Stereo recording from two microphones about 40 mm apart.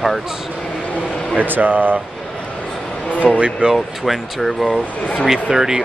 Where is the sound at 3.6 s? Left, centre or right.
Right.